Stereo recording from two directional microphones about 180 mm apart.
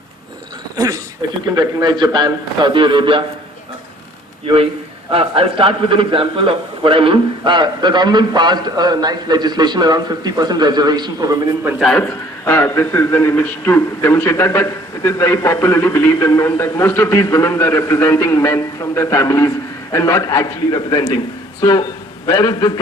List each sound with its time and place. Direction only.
1.5 s a man's voice: 25° right (ahead or behind)
4.4 s a man's voice: 30° right (ahead or behind)
11.6 s a man's voice: centre (ahead or behind); by 22.7 s 20° left (ahead or behind)